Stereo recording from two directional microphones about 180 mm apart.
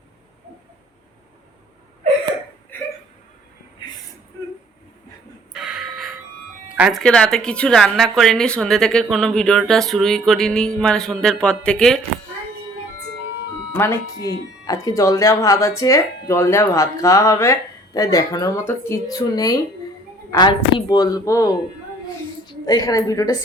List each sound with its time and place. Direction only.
5.5 s a sound: 5° right (ahead or behind)
6.7 s speech: 5° right (ahead or behind)
7.0 s a woman's voice: 5° left (ahead or behind)
13.7 s a woman's voice: 15° left (ahead or behind)